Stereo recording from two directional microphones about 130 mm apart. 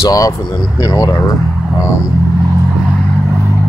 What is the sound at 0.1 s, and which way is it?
Speech, 30° left (ahead or behind).